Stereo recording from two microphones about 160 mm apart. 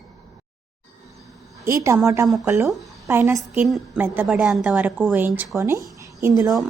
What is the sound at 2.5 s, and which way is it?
A woman's voice, 15° right (ahead or behind).